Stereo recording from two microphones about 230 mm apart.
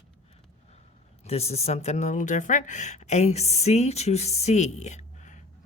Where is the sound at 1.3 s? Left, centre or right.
Left.